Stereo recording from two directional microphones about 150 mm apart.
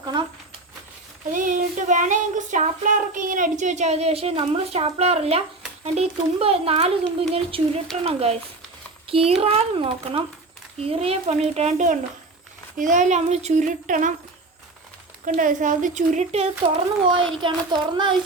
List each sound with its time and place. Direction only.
0.0 s a sound: 30° right (ahead or behind)
1.3 s child singing: 65° right (ahead or behind); by 5.4 s 40° right (ahead or behind)
5.8 s a child's voice: 45° right (ahead or behind)
12.7 s child singing: 60° right (ahead or behind)
15.2 s child singing: 60° right (ahead or behind)
17.4 s speech: 30° right (ahead or behind)